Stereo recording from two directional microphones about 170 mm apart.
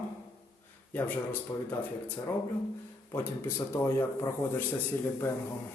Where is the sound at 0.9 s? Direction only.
10° left (ahead or behind).